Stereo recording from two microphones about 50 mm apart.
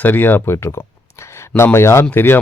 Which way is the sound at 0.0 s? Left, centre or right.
Left.